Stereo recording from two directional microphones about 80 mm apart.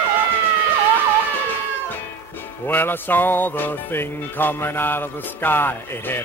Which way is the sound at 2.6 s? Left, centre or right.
Left.